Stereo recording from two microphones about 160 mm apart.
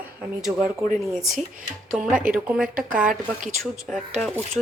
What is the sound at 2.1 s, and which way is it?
Speech, 60° right (ahead or behind).